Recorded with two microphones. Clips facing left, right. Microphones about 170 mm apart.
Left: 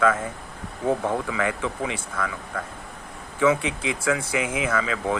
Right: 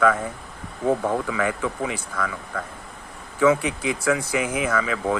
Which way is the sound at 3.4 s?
25° left (ahead or behind).